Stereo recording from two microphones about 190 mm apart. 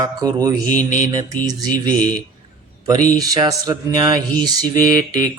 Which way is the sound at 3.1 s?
20° right (ahead or behind).